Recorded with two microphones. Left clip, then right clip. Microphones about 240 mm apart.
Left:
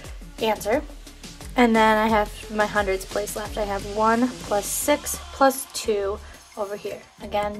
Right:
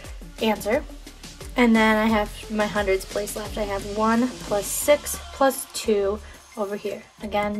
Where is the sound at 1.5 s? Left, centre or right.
Left.